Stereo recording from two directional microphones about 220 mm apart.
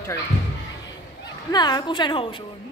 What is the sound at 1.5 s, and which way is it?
Speech, 20° left (ahead or behind).